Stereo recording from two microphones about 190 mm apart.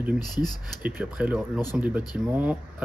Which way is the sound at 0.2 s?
20° left (ahead or behind).